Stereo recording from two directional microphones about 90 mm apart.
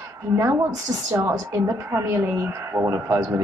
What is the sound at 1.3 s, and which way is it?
A woman's voice, 30° right (ahead or behind).